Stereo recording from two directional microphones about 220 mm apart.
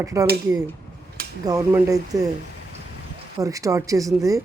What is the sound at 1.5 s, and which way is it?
Speech, 15° right (ahead or behind).